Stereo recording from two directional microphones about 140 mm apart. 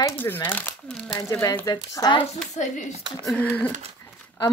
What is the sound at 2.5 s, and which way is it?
Speech, 55° left (ahead or behind).